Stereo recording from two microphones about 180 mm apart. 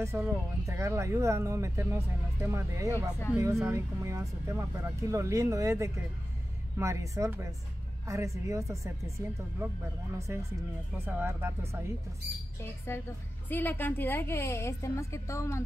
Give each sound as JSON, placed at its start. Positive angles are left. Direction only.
{"t": 0.0, "sound": "speech", "side_deg": -15}
{"t": 12.9, "sound": "a woman's voice", "side_deg": 15}